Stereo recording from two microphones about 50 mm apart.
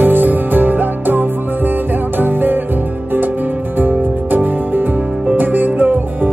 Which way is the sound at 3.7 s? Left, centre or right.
Right.